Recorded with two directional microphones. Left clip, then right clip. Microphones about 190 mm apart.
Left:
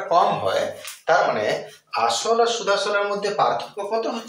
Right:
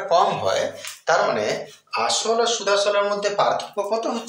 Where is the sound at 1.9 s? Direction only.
30° right (ahead or behind).